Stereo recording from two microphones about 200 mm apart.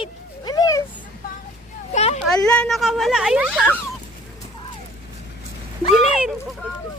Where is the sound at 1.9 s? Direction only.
35° left (ahead or behind).